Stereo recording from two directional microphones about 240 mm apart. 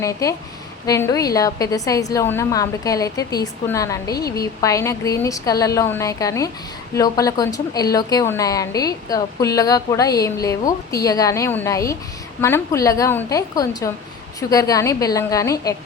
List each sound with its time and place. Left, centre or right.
0.0 s a woman's voice: centre